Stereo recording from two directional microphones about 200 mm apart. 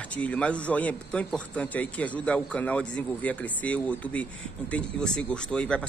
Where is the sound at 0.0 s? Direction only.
5° left (ahead or behind).